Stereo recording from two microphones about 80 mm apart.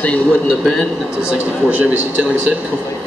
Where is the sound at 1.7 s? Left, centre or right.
Centre.